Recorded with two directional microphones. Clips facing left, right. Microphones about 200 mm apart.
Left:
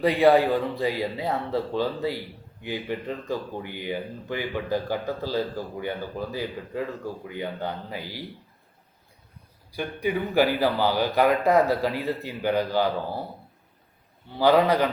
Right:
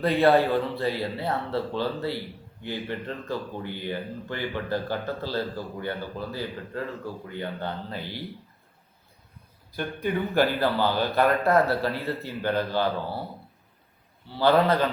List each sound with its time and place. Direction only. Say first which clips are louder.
0.0 s speech: left 2 dB; 15° left (ahead or behind)
9.7 s speech: left 1 dB; 10° left (ahead or behind)
14.3 s speech: left 1 dB; 15° left (ahead or behind)